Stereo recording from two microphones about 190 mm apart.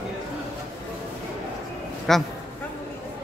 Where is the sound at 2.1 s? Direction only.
Centre (ahead or behind).